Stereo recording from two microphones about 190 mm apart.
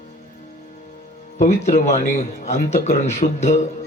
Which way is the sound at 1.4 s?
40° left (ahead or behind).